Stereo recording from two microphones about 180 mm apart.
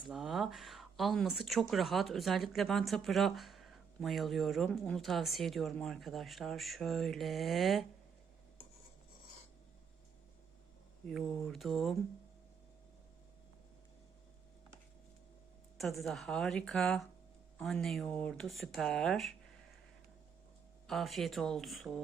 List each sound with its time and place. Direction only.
0.1 s speech: centre (ahead or behind)
11.0 s speech: 5° left (ahead or behind)
15.8 s speech: centre (ahead or behind)
20.8 s speech: centre (ahead or behind)